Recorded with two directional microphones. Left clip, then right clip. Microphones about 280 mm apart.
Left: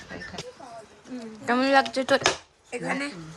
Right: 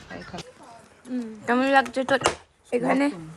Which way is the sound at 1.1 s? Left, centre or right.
Right.